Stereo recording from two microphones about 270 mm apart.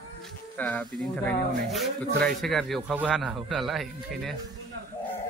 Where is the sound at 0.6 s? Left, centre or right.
Centre.